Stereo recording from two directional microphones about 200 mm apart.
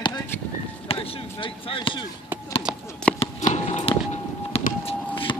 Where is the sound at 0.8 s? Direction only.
30° left (ahead or behind).